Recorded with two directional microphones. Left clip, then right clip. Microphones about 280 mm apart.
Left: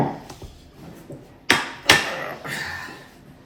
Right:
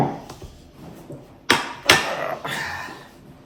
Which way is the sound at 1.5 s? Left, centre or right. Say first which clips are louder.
Even; centre.